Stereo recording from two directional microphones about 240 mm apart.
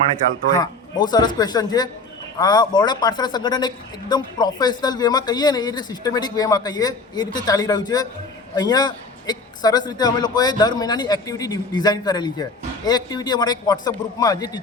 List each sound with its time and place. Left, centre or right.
0.5 s a man's voice: centre